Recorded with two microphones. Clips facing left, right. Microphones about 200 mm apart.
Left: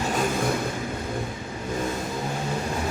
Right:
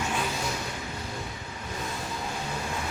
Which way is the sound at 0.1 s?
45° left (ahead or behind).